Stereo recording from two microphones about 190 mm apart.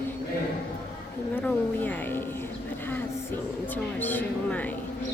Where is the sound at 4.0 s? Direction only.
10° left (ahead or behind).